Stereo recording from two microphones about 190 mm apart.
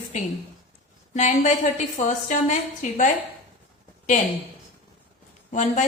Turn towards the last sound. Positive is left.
turn(degrees=40)  # may be behind; listen again after turning